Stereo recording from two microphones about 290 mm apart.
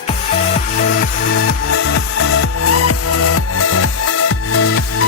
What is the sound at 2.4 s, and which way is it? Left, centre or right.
Music, left.